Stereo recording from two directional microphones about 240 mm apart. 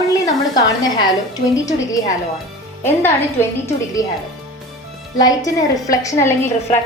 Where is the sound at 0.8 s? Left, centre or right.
Centre.